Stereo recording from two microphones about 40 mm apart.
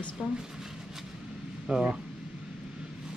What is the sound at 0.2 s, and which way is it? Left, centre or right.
Speech, centre.